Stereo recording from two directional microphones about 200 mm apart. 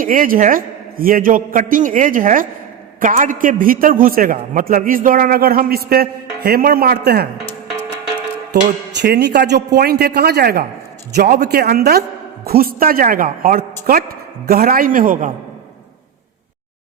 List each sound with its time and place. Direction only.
0.0 s a man's voice: 45° right (ahead or behind)
9.0 s a man's voice: 55° right (ahead or behind)